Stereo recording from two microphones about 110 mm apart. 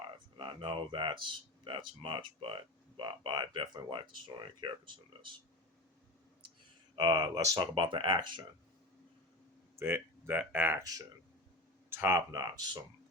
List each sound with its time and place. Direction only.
0.3 s speech: 50° right (ahead or behind)
6.9 s speech: 40° right (ahead or behind)
9.7 s speech: 20° right (ahead or behind)
11.9 s speech: 20° right (ahead or behind)